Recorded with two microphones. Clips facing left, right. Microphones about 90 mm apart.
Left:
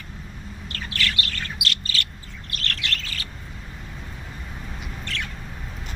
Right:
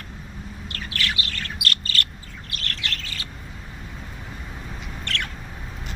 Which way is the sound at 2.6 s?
90° left.